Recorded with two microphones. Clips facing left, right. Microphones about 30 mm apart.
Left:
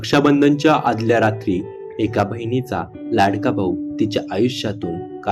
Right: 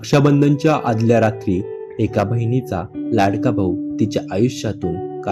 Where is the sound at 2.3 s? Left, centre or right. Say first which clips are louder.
Right 1 dB; left.